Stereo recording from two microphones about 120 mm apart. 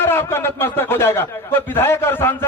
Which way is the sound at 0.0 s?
20° left (ahead or behind).